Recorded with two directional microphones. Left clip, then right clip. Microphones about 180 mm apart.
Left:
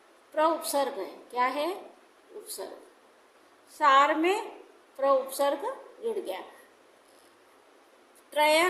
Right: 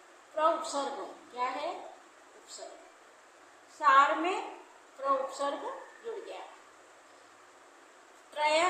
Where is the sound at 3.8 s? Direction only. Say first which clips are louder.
Left 2 dB; 50° left (ahead or behind).